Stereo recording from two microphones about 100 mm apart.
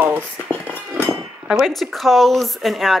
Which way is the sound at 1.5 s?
Centre (ahead or behind).